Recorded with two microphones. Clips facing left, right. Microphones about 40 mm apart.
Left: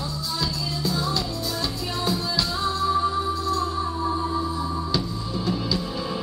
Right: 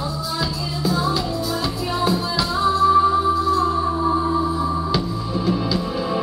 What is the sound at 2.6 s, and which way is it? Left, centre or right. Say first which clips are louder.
Music: right 9 dB; centre.